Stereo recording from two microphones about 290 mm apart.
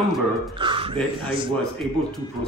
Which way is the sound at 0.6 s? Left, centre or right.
Centre.